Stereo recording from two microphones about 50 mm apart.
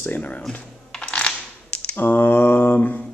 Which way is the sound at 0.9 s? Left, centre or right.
Centre.